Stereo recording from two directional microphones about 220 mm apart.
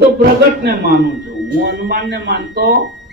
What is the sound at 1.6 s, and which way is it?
Speech, 55° right (ahead or behind).